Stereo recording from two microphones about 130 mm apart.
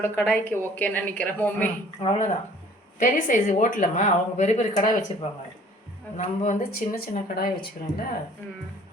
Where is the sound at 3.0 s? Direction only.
90° left.